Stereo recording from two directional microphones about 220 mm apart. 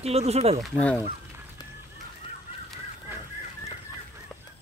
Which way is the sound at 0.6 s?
5° left (ahead or behind).